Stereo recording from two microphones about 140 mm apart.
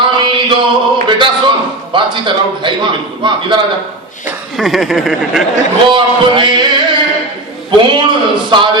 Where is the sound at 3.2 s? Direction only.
35° right (ahead or behind).